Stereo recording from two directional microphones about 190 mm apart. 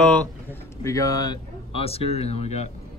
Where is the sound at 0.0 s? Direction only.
5° left (ahead or behind).